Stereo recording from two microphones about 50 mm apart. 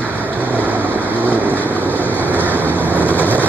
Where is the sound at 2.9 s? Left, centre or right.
Left.